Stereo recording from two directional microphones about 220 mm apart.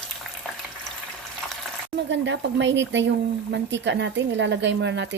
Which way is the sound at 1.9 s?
55° right (ahead or behind).